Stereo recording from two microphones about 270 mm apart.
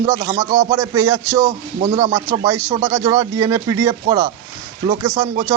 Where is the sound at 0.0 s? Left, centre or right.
Centre.